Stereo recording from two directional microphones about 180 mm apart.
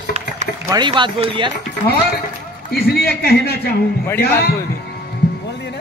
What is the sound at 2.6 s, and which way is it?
A man's voice, 60° left (ahead or behind).